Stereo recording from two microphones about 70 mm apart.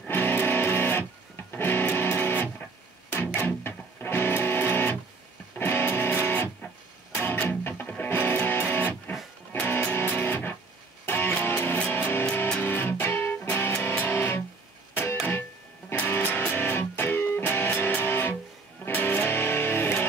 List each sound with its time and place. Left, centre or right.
0.1 s music: left
15.9 s music: left